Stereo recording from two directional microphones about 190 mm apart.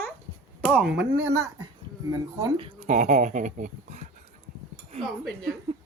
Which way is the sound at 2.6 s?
35° right (ahead or behind).